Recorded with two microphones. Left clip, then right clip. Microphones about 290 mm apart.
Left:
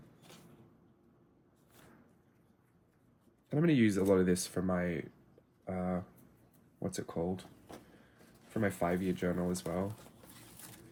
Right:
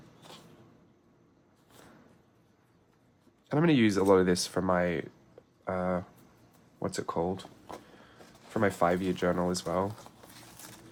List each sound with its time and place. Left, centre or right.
3.5 s speech: centre
5.6 s a sound: centre
6.8 s speech: centre